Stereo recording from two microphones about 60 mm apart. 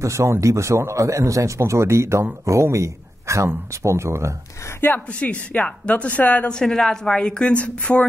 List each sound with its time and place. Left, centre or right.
0.0 s a man's voice: right
4.7 s speech: left
5.2 s speech: left
6.5 s a woman's voice: centre